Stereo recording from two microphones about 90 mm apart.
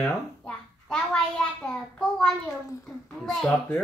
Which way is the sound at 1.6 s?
5° left (ahead or behind).